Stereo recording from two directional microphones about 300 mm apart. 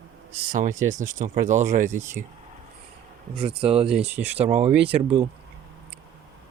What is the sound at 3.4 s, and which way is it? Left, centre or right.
Speech, centre.